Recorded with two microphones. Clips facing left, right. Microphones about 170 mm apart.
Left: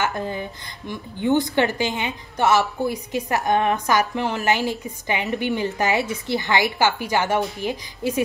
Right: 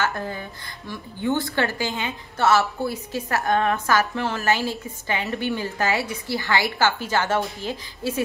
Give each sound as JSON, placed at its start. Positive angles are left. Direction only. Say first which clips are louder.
{"t": 0.0, "sound": "a woman's voice", "louder": "left 2 dB", "side_deg": 20}